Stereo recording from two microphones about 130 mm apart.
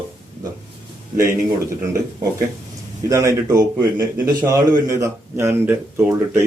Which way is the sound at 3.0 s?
25° right (ahead or behind).